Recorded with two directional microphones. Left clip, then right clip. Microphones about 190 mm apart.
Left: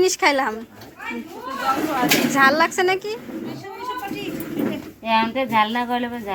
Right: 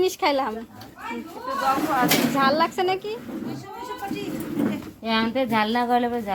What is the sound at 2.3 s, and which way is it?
Speech, 5° left (ahead or behind).